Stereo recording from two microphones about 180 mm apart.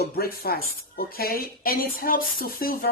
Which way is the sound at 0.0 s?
55° left (ahead or behind).